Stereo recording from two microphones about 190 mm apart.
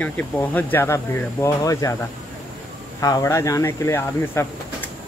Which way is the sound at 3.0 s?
20° left (ahead or behind).